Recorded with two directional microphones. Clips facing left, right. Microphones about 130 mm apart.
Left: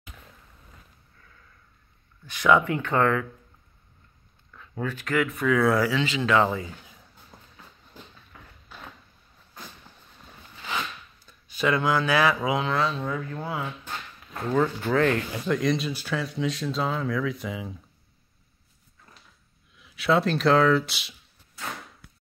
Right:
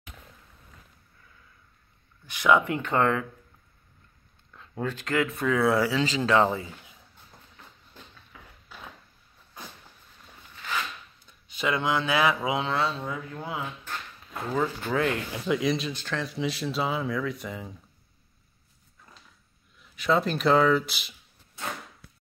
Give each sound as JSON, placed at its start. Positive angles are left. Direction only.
{"t": 2.2, "sound": "speech", "side_deg": -15}
{"t": 4.8, "sound": "speech", "side_deg": -25}
{"t": 11.2, "sound": "speech", "side_deg": -20}
{"t": 14.3, "sound": "speech", "side_deg": -5}
{"t": 19.8, "sound": "speech", "side_deg": 0}